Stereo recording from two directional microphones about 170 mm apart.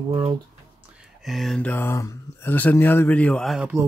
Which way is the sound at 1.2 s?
Centre (ahead or behind).